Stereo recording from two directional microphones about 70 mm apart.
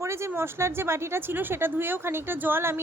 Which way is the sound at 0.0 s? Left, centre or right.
Right.